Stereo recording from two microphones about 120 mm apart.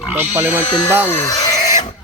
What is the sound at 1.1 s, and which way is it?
Speech, 20° left (ahead or behind).